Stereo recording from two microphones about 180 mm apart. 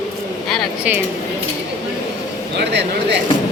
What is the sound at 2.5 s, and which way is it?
Speech, 70° right (ahead or behind).